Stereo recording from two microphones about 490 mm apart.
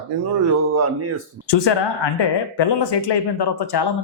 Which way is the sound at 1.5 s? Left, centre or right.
Left.